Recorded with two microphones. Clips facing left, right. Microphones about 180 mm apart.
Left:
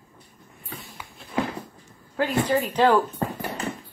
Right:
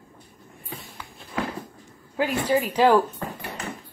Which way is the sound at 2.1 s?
10° right (ahead or behind).